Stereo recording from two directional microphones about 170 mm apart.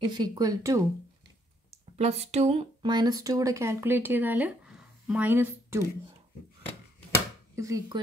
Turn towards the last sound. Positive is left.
turn(degrees=-20)  # may be behind; listen again after turning